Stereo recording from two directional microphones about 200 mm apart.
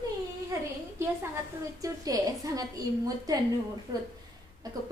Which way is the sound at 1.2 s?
15° right (ahead or behind).